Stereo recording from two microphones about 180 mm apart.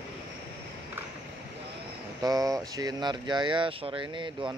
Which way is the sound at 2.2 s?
20° right (ahead or behind).